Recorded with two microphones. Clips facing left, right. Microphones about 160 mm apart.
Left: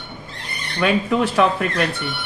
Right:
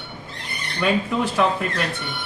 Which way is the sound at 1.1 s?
70° left (ahead or behind).